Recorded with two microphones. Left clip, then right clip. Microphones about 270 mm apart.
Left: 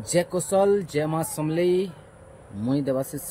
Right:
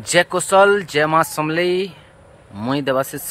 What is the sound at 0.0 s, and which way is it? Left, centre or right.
Speech, right.